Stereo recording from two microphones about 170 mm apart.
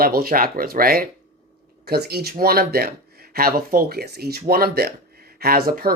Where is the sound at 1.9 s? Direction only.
70° right (ahead or behind).